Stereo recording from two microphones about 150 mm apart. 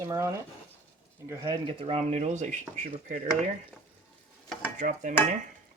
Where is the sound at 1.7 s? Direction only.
40° right (ahead or behind).